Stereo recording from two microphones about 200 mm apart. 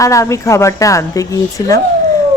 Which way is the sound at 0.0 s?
15° left (ahead or behind).